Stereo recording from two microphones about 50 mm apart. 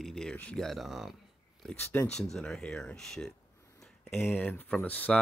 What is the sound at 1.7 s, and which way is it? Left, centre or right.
Speech, left.